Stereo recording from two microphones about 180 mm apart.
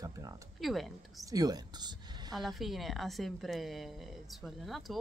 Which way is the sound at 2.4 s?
Centre (ahead or behind).